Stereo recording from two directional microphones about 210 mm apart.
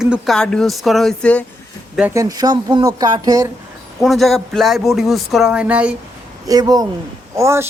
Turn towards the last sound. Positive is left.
turn(degrees=-15)  # may be behind; listen again after turning